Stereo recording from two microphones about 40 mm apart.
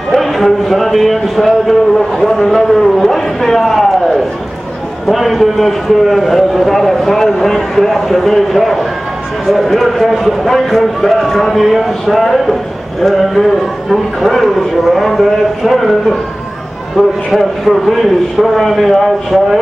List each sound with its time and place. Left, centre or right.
0.1 s a man's voice: centre
16.9 s a man's voice: centre